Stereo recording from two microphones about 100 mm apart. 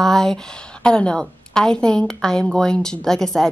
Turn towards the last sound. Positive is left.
turn(degrees=5)  # may be behind; listen again after turning